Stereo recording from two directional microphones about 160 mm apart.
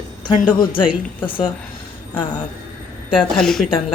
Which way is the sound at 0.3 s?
30° left (ahead or behind).